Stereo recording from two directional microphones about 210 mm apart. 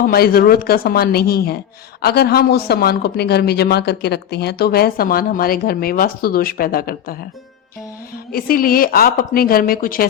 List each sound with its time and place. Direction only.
0.0 s speech: 45° left (ahead or behind)
8.3 s speech: 45° left (ahead or behind)